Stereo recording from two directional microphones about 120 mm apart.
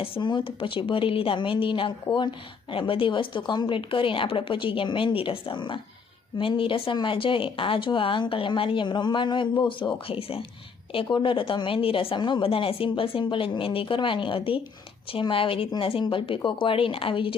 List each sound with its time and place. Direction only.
0.0 s speech: 45° left (ahead or behind)